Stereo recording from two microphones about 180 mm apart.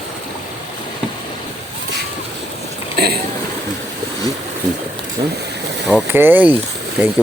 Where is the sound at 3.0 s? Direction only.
65° right (ahead or behind).